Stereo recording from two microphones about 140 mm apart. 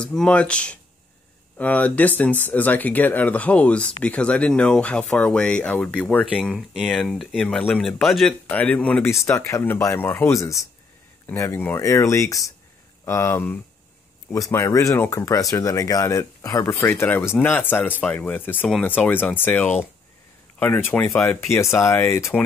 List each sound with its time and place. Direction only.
0.0 s speech: 5° left (ahead or behind)
9.2 s speech: 20° left (ahead or behind)